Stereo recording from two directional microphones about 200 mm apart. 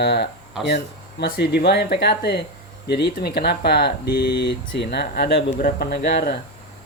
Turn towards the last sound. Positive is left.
turn(degrees=50)  # may be behind; listen again after turning